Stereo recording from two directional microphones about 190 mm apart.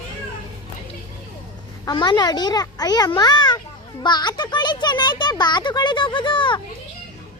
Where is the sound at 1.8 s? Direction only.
25° left (ahead or behind).